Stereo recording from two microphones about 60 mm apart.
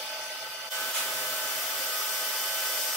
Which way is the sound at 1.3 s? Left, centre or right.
Centre.